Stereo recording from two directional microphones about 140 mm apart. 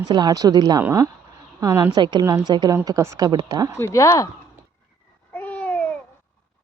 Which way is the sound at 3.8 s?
20° left (ahead or behind).